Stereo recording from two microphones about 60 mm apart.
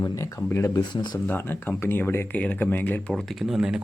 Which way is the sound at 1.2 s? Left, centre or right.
Left.